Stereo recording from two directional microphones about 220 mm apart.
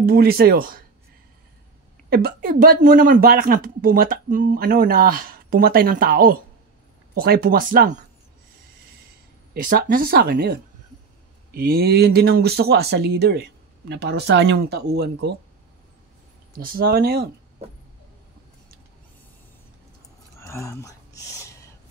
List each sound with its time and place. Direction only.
0.0 s speech: 45° right (ahead or behind)
2.0 s speech: 45° right (ahead or behind)
9.5 s speech: 40° right (ahead or behind)
16.5 s speech: 40° right (ahead or behind)
20.3 s a sound: 10° left (ahead or behind)